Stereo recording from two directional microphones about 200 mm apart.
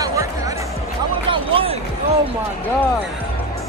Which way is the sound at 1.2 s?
30° right (ahead or behind).